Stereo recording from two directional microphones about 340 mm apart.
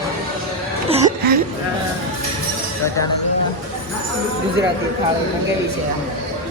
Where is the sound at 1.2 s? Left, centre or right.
Right.